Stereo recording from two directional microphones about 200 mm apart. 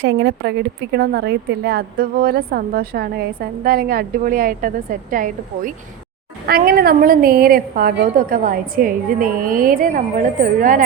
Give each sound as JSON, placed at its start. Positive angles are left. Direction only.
{"t": 0.0, "sound": "a woman's voice", "side_deg": -60}